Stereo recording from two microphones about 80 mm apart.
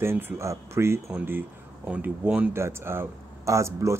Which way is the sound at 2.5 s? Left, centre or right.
Right.